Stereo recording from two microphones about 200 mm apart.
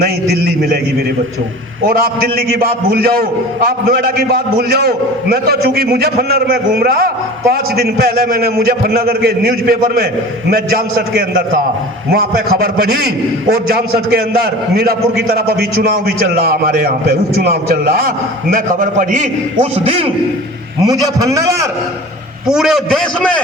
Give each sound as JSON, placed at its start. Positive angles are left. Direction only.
{"t": 0.0, "sound": "a man's voice", "side_deg": -50}
{"t": 1.9, "sound": "a man's voice", "side_deg": -50}
{"t": 3.7, "sound": "a man's voice", "side_deg": -50}
{"t": 20.8, "sound": "a man's voice", "side_deg": -20}
{"t": 22.4, "sound": "a man's voice", "side_deg": 0}